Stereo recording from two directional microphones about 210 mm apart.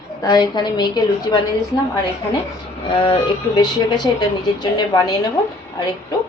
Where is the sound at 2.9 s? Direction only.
25° left (ahead or behind).